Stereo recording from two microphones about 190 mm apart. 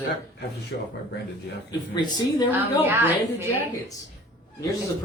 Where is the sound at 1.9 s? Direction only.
20° left (ahead or behind).